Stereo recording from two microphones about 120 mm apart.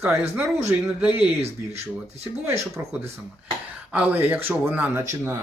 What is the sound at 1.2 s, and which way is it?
Speech, 60° right (ahead or behind).